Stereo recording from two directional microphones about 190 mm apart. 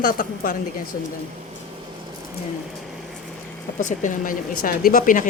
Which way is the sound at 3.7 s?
40° left (ahead or behind).